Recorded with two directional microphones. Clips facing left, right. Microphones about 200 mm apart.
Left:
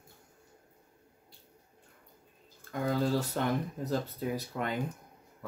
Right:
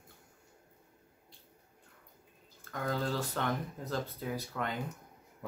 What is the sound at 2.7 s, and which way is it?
Speech, 10° left (ahead or behind).